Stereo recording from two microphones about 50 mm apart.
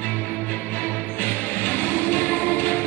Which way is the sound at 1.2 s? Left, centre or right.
Left.